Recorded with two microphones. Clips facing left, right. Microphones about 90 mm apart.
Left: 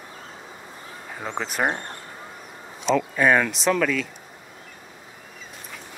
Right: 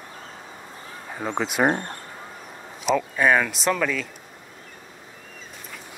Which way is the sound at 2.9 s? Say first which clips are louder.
Left 1 dB; 5° right (ahead or behind).